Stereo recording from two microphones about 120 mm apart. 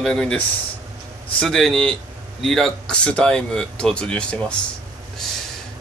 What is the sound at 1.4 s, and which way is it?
Speech, 5° left (ahead or behind).